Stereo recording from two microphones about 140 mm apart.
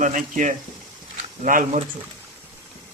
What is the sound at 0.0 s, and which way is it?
Speech, 65° right (ahead or behind).